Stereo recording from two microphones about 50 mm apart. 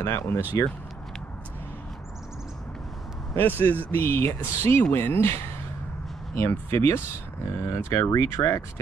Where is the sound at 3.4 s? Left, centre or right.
Left.